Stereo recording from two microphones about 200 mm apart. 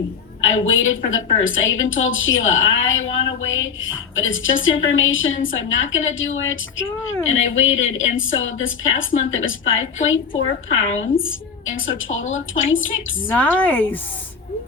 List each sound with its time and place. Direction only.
0.4 s a woman's voice: 75° left (ahead or behind)
11.2 s a sound: 75° left (ahead or behind)
11.9 s a woman's voice: 75° left (ahead or behind)
13.3 s speech: 10° left (ahead or behind)